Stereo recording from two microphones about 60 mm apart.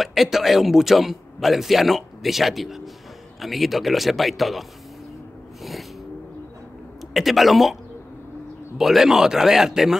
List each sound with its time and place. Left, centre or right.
0.0 s a man's voice: centre
5.6 s a sound: centre
7.2 s a man's voice: centre
8.7 s speech: centre